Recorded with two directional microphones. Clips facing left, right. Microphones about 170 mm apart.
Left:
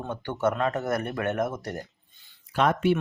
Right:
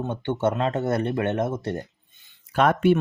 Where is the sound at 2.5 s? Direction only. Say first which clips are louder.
Right 4 dB; 55° right (ahead or behind).